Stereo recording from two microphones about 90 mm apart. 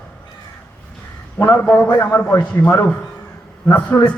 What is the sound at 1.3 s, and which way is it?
A man's voice, 25° left (ahead or behind).